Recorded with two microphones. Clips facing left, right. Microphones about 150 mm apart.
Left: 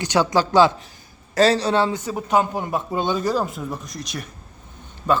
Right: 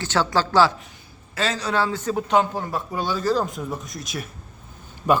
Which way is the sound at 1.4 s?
35° left (ahead or behind).